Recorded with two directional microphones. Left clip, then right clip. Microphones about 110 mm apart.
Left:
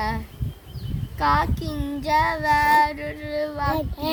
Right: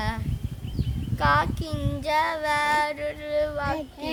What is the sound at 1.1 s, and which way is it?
Child singing, 20° right (ahead or behind).